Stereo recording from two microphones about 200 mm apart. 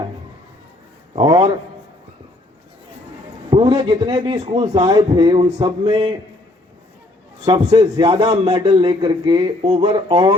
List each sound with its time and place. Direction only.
1.1 s a man's voice: 25° right (ahead or behind)
3.5 s a man's voice: 20° right (ahead or behind)
7.4 s a man's voice: 25° right (ahead or behind)